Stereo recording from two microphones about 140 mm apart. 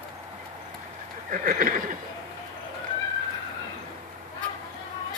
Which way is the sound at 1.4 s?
80° right.